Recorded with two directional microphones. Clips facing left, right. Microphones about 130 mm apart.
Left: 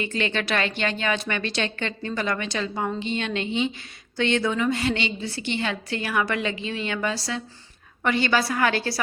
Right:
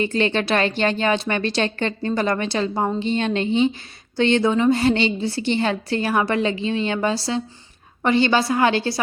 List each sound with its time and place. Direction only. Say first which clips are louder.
0.0 s a woman's voice: right 6 dB; 35° right (ahead or behind)